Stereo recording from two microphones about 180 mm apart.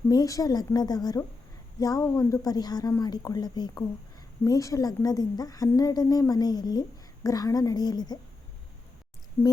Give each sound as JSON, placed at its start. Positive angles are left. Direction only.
{"t": 0.1, "sound": "a woman's voice", "side_deg": 20}